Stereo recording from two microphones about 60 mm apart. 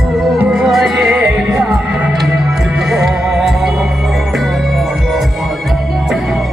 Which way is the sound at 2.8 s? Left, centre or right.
Centre.